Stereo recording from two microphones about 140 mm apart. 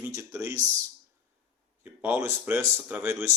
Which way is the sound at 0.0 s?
20° right (ahead or behind).